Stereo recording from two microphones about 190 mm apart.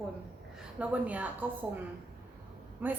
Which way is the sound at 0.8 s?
5° right (ahead or behind).